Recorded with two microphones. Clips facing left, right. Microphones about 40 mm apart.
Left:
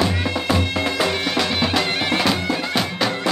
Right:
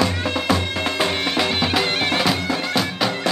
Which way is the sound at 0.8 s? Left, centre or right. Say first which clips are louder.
Right 2 dB; right.